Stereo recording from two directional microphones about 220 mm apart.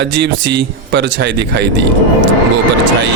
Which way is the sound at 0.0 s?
50° right (ahead or behind).